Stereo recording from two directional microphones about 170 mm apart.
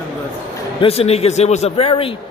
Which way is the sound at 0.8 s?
35° left (ahead or behind).